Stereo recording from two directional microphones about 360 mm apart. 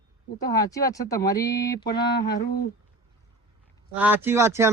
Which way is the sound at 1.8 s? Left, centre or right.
Left.